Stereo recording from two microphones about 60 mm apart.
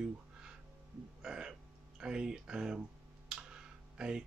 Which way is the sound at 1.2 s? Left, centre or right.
Centre.